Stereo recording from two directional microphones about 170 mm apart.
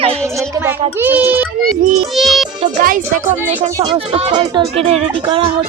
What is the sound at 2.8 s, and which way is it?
Speech, 55° right (ahead or behind).